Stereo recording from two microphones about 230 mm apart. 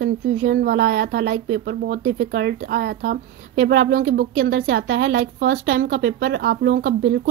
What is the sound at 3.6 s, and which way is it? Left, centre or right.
Speech, right.